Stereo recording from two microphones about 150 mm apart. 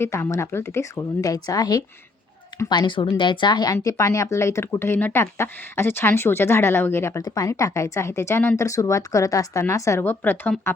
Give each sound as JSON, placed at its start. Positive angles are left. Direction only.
{"t": 0.0, "sound": "speech", "side_deg": 20}